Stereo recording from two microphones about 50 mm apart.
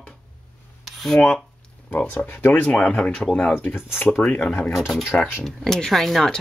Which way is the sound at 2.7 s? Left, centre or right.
Centre.